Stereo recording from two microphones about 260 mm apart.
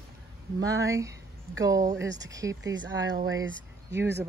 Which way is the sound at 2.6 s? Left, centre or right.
Right.